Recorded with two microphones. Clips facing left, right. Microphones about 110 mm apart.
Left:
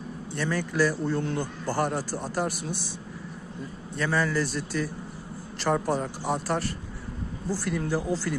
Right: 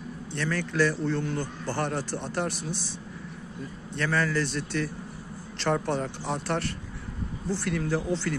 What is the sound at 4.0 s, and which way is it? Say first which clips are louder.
A man's voice: left 1 dB; 10° left (ahead or behind).